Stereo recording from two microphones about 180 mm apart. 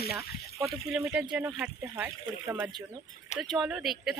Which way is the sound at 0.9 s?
5° right (ahead or behind).